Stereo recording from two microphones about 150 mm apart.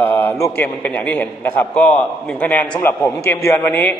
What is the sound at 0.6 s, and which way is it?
A man's voice, 10° left (ahead or behind).